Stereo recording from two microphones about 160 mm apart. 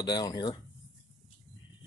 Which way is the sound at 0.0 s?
25° left (ahead or behind).